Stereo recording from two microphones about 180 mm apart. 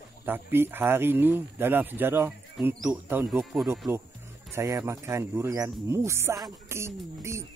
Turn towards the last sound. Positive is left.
turn(degrees=-15)  # may be behind; listen again after turning